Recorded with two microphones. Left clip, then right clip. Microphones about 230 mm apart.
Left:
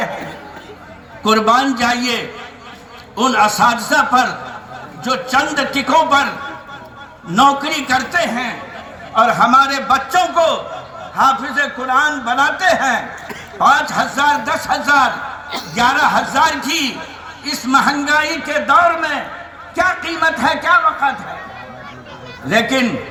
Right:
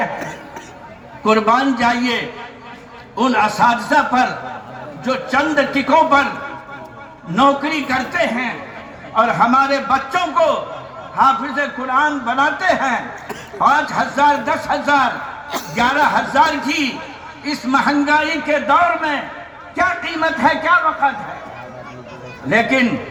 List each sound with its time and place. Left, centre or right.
1.2 s a man's voice: left
7.3 s a man's voice: left
22.4 s a man's voice: left